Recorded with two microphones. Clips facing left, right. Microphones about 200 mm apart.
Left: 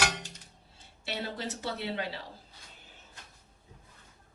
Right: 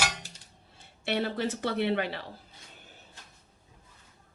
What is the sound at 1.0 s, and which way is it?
Speech, 60° right (ahead or behind).